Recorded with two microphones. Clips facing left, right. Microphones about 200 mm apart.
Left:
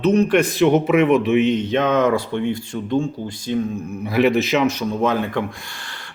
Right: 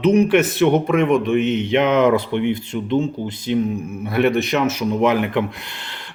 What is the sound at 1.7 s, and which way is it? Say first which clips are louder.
Speech: right 5 dB; 20° right (ahead or behind).